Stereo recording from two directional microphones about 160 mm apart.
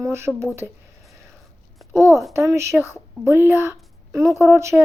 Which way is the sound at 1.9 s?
15° right (ahead or behind).